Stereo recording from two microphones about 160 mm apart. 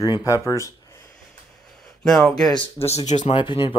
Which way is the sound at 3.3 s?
30° left (ahead or behind).